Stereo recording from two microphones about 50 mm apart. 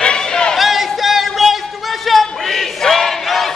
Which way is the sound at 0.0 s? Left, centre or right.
Centre.